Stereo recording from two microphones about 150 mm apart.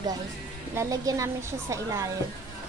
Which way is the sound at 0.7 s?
20° right (ahead or behind).